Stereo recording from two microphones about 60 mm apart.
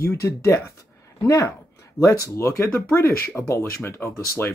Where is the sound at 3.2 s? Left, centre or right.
Left.